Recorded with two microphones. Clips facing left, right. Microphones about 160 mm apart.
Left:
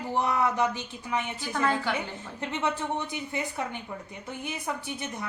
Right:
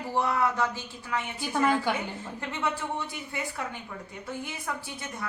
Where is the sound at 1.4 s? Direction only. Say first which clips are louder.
Right 5 dB; 15° right (ahead or behind).